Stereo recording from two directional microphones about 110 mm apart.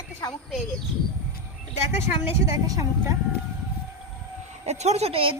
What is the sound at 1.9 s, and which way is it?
Speech, 25° right (ahead or behind).